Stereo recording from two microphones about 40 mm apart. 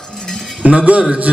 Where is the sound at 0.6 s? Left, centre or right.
Right.